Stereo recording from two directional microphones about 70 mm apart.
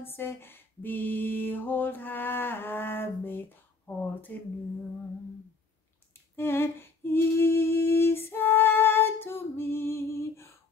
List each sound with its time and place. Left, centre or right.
0.0 s mantra: left
6.3 s humming: left